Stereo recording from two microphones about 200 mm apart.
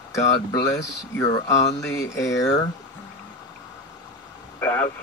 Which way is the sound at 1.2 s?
15° left (ahead or behind).